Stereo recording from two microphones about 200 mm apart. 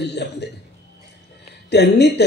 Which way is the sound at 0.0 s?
55° left (ahead or behind).